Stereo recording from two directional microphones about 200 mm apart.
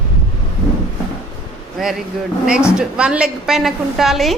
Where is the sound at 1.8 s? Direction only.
Centre (ahead or behind).